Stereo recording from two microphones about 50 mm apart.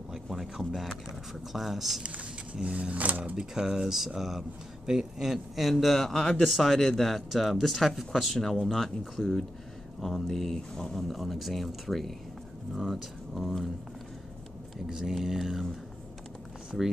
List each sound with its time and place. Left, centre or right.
0.1 s a sound: centre
0.7 s speech: centre
1.3 s speech: centre
2.0 s speech: right
3.3 s speech: centre
6.4 s speech: centre
14.9 s speech: centre